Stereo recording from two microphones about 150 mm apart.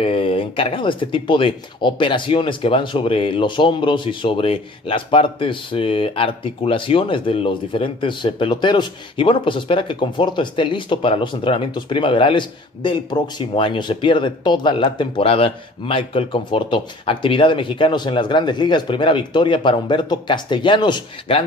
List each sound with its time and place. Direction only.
0.0 s speech: 40° left (ahead or behind)